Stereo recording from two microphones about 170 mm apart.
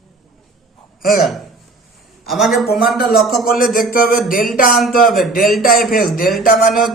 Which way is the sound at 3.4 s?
60° left (ahead or behind).